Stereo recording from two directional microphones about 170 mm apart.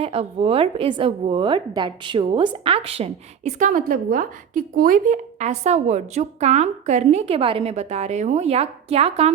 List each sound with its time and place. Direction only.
0.0 s a woman's voice: 35° right (ahead or behind)